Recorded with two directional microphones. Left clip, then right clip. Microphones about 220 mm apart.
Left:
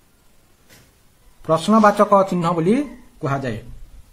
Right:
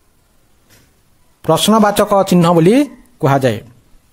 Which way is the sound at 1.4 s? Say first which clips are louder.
Right 3 dB; 45° right (ahead or behind).